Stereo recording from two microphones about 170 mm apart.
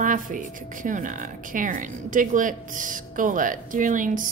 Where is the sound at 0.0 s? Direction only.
50° right (ahead or behind).